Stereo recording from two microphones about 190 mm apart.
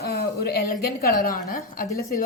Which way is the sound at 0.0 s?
60° left (ahead or behind).